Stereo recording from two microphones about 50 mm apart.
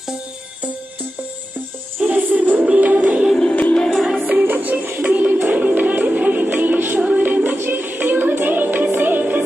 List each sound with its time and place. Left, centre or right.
2.0 s music: centre
2.3 s music: right
3.3 s music: left
3.9 s music: centre
4.5 s music: right
5.0 s music: right
7.0 s music: right